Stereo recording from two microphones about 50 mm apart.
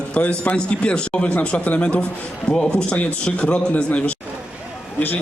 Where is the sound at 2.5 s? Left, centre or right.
Centre.